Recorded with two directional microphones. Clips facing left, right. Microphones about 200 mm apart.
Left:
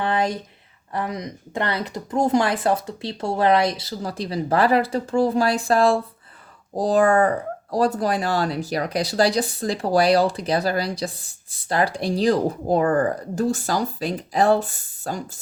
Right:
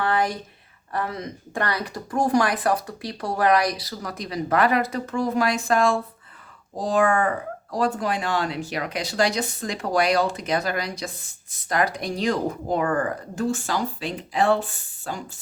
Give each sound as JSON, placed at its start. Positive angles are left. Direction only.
{"t": 0.0, "sound": "speech", "side_deg": 20}